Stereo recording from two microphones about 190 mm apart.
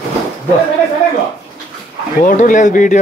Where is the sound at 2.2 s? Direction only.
45° left (ahead or behind).